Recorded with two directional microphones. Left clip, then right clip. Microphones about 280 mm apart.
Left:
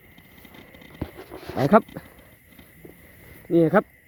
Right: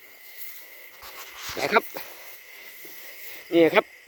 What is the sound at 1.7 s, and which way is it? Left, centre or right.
Speech, centre.